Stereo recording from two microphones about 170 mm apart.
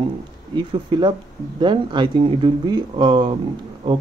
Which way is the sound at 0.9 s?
30° right (ahead or behind).